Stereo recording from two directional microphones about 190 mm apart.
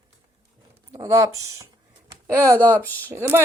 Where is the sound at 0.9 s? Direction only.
15° right (ahead or behind).